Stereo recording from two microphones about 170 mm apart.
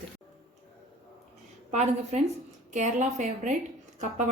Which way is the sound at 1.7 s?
40° right (ahead or behind).